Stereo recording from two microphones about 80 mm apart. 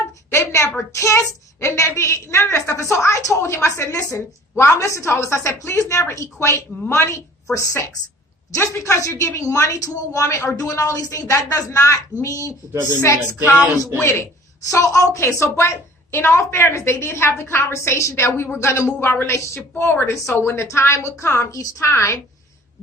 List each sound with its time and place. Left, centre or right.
0.3 s a woman's voice: left
7.5 s a woman's voice: left
13.4 s a sound: right
14.0 s a woman's voice: left
14.7 s a woman's voice: left